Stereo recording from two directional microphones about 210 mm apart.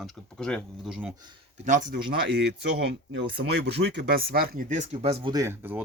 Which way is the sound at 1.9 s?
50° right (ahead or behind).